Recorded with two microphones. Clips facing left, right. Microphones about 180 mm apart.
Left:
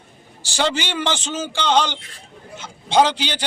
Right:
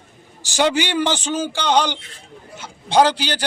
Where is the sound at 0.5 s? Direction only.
15° right (ahead or behind).